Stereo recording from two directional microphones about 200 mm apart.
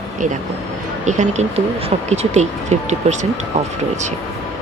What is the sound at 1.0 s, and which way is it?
Speech, 35° right (ahead or behind).